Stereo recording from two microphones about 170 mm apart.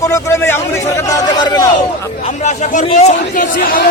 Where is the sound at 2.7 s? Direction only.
45° left (ahead or behind).